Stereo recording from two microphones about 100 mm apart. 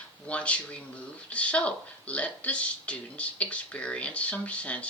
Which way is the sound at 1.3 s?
10° left (ahead or behind).